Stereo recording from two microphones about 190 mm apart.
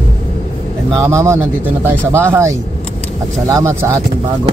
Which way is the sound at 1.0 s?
15° right (ahead or behind).